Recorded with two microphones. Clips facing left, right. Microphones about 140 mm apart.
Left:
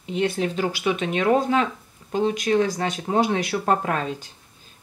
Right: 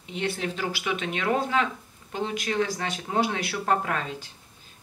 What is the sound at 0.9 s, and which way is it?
Speech, 35° left (ahead or behind).